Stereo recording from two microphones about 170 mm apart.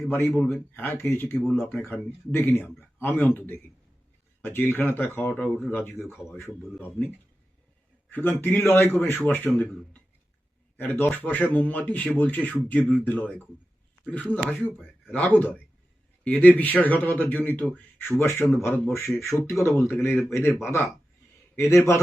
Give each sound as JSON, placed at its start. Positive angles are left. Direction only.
{"t": 0.1, "sound": "speech", "side_deg": 10}
{"t": 8.1, "sound": "speech", "side_deg": 10}
{"t": 10.8, "sound": "a man's voice", "side_deg": 10}